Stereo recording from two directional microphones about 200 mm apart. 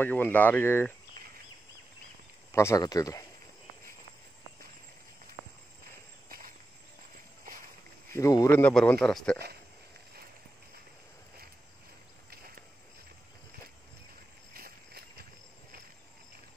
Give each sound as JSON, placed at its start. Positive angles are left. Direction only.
{"t": 0.0, "sound": "speech", "side_deg": 10}
{"t": 2.5, "sound": "speech", "side_deg": 15}
{"t": 6.2, "sound": "walk", "side_deg": -45}
{"t": 8.1, "sound": "speech", "side_deg": 15}
{"t": 14.5, "sound": "a sound", "side_deg": -50}